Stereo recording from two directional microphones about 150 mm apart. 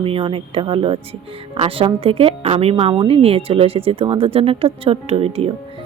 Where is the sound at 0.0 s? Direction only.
35° right (ahead or behind).